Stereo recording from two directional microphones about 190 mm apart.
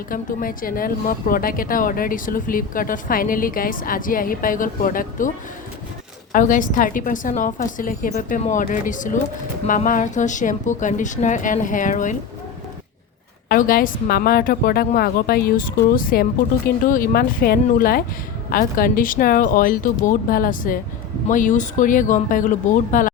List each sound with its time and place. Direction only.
0.1 s a woman's voice: 45° left (ahead or behind)
6.3 s a woman's voice: 45° left (ahead or behind)
13.5 s a woman's voice: 50° left (ahead or behind)